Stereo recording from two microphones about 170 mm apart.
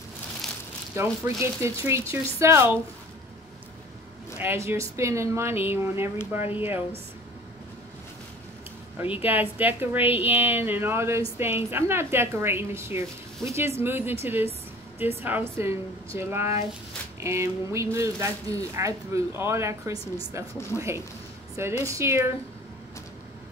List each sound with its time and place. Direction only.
0.9 s speech: 15° right (ahead or behind)
4.4 s speech: 15° right (ahead or behind)
8.9 s speech: 10° right (ahead or behind)
21.8 s speech: 15° right (ahead or behind)